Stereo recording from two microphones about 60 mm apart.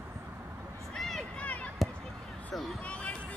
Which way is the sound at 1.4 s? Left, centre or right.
Left.